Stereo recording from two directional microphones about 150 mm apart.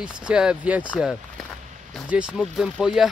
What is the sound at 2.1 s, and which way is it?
Speech, 5° right (ahead or behind).